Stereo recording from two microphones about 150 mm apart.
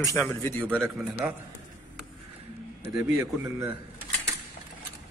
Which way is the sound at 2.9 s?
20° right (ahead or behind).